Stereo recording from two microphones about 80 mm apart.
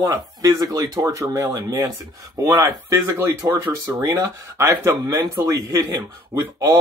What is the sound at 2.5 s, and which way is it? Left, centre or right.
Speech, right.